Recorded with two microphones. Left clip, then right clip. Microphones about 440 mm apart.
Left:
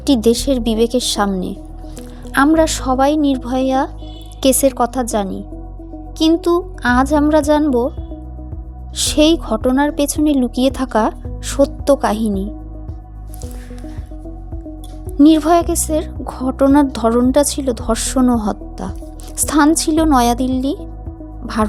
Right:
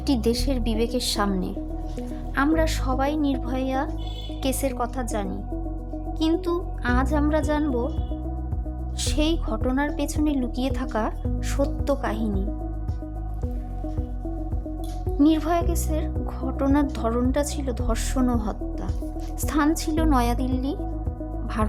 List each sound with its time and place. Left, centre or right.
0.0 s a woman's voice: right
9.0 s a woman's voice: right
15.2 s a woman's voice: right
21.4 s music: right